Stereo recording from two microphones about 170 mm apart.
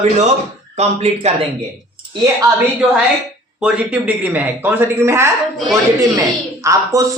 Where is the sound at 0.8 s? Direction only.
40° right (ahead or behind).